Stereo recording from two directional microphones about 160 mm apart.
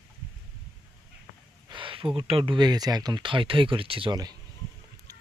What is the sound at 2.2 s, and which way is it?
Speech, 35° right (ahead or behind).